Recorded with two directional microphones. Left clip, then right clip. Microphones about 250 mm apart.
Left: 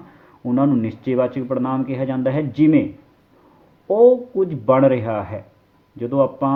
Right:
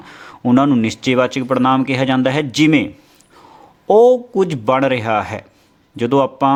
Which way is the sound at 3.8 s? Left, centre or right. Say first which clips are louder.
Right 3 dB; right.